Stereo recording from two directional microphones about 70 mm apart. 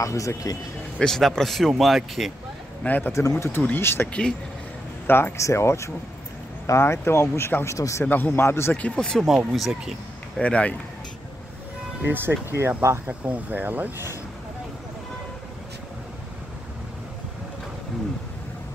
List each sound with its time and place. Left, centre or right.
0.0 s speech: left
0.9 s a man's voice: centre
2.8 s a man's voice: left
3.1 s speech: left
5.4 s speech: left
8.0 s speech: left
8.7 s speech: centre
9.5 s a man's voice: centre
10.4 s speech: centre
12.1 s speech: right
13.2 s speech: right